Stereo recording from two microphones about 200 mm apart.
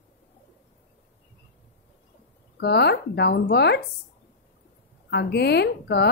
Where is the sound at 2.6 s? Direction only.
55° left (ahead or behind).